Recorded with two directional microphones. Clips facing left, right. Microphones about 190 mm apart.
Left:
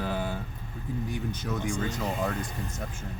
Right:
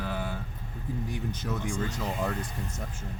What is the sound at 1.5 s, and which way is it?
Speech, centre (ahead or behind).